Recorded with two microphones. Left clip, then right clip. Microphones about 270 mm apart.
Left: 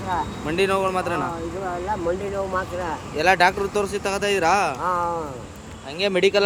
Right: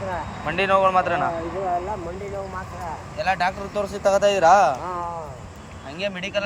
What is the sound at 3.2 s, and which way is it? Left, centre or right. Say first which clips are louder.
Speech: left 5 dB; centre.